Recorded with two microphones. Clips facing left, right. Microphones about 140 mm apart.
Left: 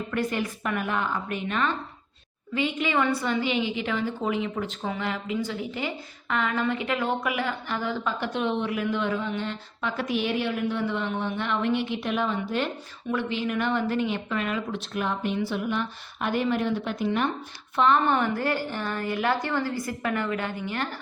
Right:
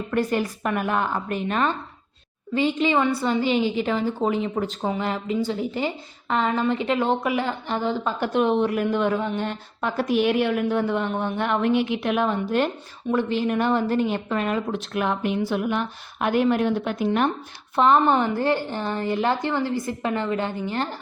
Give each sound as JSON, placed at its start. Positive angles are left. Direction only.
{"t": 0.1, "sound": "a woman's voice", "side_deg": -40}
{"t": 8.2, "sound": "a woman's voice", "side_deg": -45}
{"t": 17.7, "sound": "a woman's voice", "side_deg": -35}